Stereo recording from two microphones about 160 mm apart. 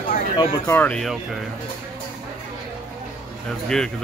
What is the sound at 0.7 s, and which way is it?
Speech, 10° left (ahead or behind).